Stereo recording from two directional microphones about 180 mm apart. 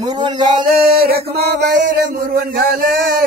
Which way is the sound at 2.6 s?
55° right (ahead or behind).